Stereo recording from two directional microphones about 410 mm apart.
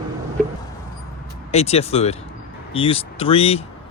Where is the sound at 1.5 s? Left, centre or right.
Centre.